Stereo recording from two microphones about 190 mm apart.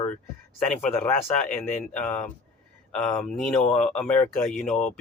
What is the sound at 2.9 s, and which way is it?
Speech, 5° left (ahead or behind).